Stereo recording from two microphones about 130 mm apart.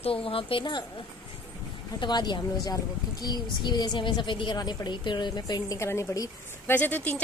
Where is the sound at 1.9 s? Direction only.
35° left (ahead or behind).